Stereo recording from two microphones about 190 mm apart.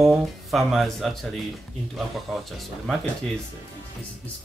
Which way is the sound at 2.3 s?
Centre (ahead or behind).